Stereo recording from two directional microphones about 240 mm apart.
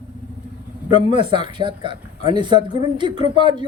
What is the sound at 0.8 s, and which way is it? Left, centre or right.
A man's voice, centre.